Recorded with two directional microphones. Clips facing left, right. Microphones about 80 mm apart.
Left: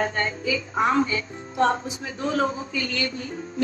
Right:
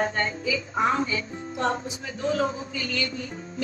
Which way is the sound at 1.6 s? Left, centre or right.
Left.